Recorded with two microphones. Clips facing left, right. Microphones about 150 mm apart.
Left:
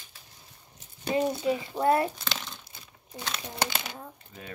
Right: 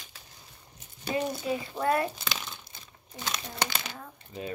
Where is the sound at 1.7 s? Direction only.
25° left (ahead or behind).